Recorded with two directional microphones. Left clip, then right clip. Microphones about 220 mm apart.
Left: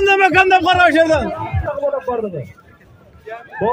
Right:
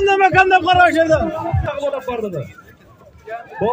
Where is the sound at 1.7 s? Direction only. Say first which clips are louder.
Left 4 dB; 20° right (ahead or behind).